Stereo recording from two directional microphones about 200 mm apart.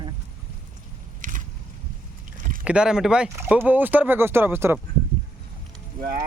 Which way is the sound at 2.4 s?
40° right (ahead or behind).